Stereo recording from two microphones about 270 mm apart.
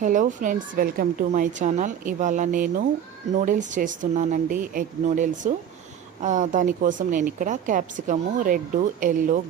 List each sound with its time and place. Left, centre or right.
0.0 s speech: right